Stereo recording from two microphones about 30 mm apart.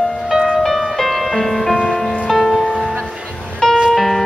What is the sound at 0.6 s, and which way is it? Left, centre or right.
Music, centre.